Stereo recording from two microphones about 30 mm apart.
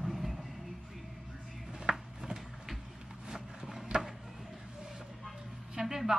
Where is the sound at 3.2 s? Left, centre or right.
Centre.